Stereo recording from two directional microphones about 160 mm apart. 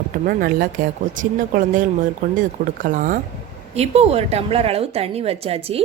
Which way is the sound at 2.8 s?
60° right (ahead or behind).